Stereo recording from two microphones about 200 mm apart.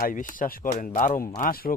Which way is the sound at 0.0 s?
40° left (ahead or behind).